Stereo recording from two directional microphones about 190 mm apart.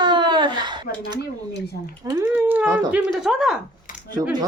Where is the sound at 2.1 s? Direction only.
10° right (ahead or behind).